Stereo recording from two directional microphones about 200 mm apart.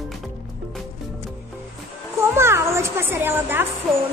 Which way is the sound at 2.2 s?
15° right (ahead or behind).